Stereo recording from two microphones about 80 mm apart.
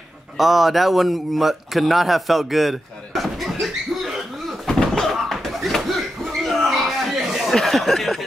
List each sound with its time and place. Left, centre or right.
0.4 s a man's voice: centre
4.6 s door: centre
6.5 s a sound: centre
7.5 s chuckle: centre